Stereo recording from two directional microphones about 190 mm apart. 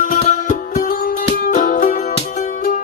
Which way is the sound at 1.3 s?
40° left (ahead or behind).